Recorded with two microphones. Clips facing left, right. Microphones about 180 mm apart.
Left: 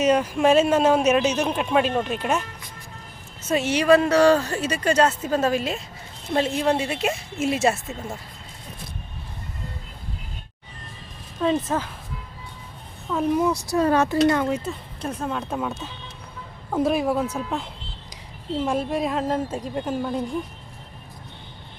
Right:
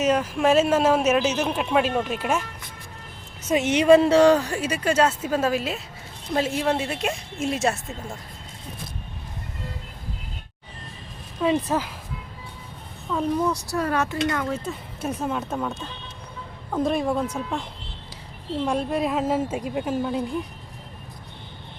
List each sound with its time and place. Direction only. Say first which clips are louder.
0.0 s speech: left 2 dB; centre (ahead or behind)
3.5 s speech: right 2 dB; 20° right (ahead or behind); by 7.9 s 5° left (ahead or behind)
11.4 s speech: even; 10° right (ahead or behind)
13.1 s speech: left 2 dB; 5° left (ahead or behind); by 14.5 s 30° left (ahead or behind)
14.7 s speech: right 1 dB; 5° right (ahead or behind)